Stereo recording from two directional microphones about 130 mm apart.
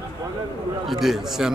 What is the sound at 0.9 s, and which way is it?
Speech, centre (ahead or behind).